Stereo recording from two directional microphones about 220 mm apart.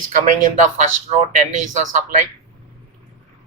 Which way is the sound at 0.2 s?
35° right (ahead or behind).